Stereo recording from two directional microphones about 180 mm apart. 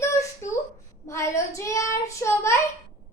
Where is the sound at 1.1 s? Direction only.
15° left (ahead or behind).